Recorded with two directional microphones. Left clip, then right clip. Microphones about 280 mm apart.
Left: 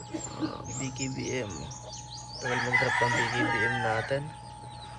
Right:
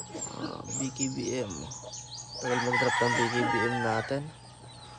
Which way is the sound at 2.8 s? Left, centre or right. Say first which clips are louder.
Even; centre.